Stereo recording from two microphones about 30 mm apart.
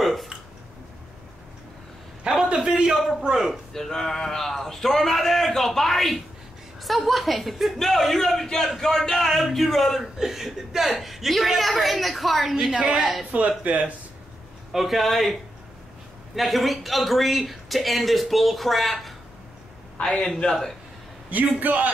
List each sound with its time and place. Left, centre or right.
0.0 s a sound: centre
2.4 s a sound: right
3.0 s a man's voice: centre
3.7 s a man's voice: centre
10.1 s a man's voice: centre
13.3 s speech: right
13.7 s a man's voice: right
14.7 s a man's voice: centre
16.3 s a man's voice: centre
20.0 s a man's voice: left
21.3 s a man's voice: right